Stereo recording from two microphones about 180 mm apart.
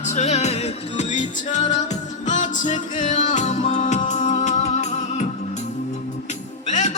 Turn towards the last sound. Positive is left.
turn(degrees=40)  # may be behind; listen again after turning